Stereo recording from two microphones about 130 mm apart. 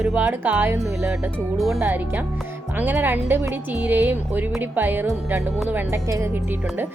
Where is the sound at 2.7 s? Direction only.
15° right (ahead or behind).